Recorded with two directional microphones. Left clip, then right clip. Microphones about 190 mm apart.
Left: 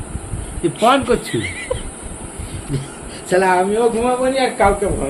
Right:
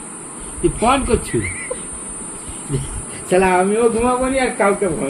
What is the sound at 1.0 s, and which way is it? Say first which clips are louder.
Speech: left 1 dB; 15° left (ahead or behind).